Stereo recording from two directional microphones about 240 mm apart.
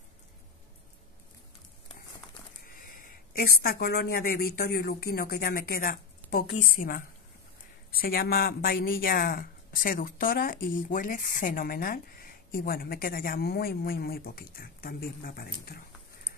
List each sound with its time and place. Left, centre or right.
3.5 s speech: left